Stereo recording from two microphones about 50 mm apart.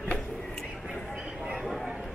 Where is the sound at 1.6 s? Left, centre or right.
Centre.